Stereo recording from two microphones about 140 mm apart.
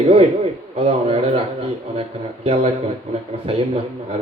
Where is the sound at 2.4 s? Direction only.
40° right (ahead or behind).